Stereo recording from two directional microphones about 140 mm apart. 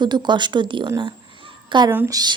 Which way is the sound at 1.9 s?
25° right (ahead or behind).